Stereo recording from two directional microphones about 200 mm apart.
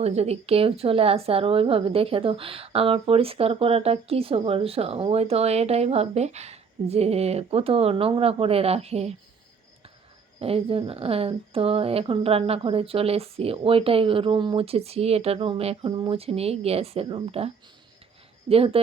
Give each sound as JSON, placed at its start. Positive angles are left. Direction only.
{"t": 0.0, "sound": "a woman's voice", "side_deg": -30}
{"t": 10.4, "sound": "a woman's voice", "side_deg": -30}